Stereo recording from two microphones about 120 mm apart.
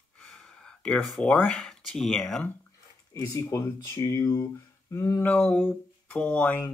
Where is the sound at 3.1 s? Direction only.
25° left (ahead or behind).